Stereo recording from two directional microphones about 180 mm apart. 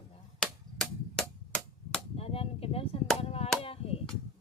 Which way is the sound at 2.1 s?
30° left (ahead or behind).